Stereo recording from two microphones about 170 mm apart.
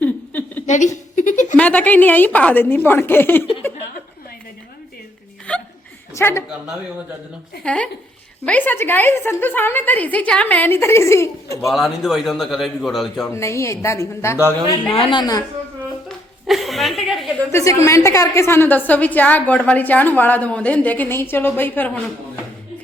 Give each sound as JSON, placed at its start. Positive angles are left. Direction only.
{"t": 0.0, "sound": "a sound", "side_deg": 10}
{"t": 0.7, "sound": "speech", "side_deg": 45}
{"t": 1.5, "sound": "a woman's voice", "side_deg": 10}
{"t": 5.5, "sound": "hiccup", "side_deg": 5}
{"t": 6.1, "sound": "a woman's voice", "side_deg": 15}
{"t": 7.6, "sound": "a woman's voice", "side_deg": 5}
{"t": 11.7, "sound": "a man's voice", "side_deg": 0}
{"t": 13.3, "sound": "a woman's voice", "side_deg": 15}
{"t": 14.8, "sound": "a woman's voice", "side_deg": 30}
{"t": 16.0, "sound": "chuckle", "side_deg": 0}
{"t": 17.5, "sound": "a woman's voice", "side_deg": 15}